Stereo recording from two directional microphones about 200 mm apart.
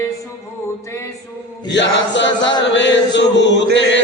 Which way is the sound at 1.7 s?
65° left (ahead or behind).